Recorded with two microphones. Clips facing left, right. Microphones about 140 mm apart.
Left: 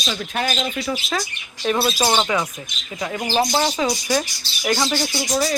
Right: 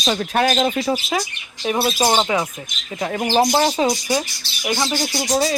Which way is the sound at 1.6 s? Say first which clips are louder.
Right 1 dB; 20° right (ahead or behind).